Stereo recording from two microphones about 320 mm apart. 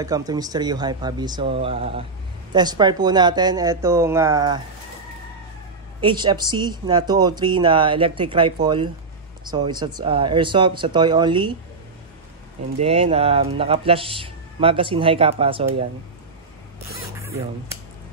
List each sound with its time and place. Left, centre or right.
0.0 s speech: centre
5.9 s speech: centre
12.7 s speech: centre
17.2 s speech: centre